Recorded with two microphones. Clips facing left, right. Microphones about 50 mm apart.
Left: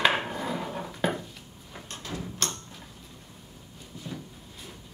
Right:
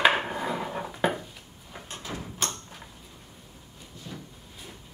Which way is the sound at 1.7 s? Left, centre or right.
Centre.